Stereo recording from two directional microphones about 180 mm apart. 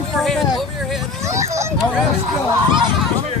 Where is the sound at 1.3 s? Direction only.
15° right (ahead or behind).